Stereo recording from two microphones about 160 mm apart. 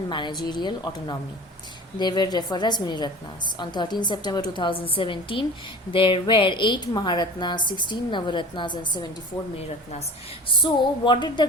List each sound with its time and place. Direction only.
0.1 s a woman's voice: 30° left (ahead or behind)
9.6 s a woman's voice: 40° left (ahead or behind)
10.6 s a woman's voice: 30° left (ahead or behind)